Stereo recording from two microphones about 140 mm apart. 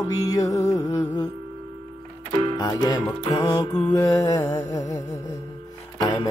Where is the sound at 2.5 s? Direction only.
30° left (ahead or behind).